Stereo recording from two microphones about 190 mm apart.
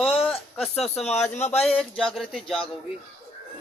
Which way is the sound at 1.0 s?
35° left (ahead or behind).